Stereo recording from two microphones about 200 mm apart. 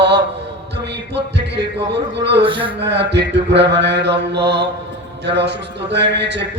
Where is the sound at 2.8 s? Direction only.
60° right (ahead or behind).